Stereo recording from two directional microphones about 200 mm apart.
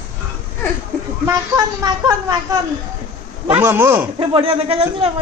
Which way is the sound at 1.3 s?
20° right (ahead or behind).